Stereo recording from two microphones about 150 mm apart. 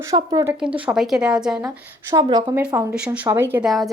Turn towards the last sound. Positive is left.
turn(degrees=0)  # may be behind; listen again after turning